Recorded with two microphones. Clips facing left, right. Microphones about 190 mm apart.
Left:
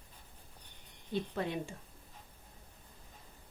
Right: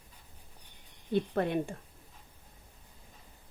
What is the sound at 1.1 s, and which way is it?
Speech, 55° right (ahead or behind).